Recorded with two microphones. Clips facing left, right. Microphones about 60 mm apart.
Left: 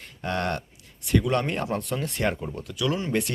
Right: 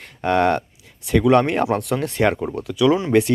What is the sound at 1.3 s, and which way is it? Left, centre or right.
Speech, right.